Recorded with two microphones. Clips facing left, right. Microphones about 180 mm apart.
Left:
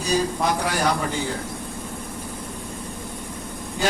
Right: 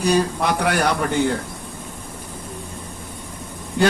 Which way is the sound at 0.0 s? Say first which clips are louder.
Right 3 dB; 65° right (ahead or behind).